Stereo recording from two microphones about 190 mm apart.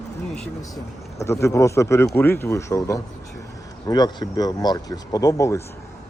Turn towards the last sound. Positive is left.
turn(degrees=15)  # may be behind; listen again after turning